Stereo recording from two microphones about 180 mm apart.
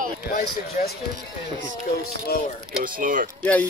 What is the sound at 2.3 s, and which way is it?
Speech, 60° left (ahead or behind).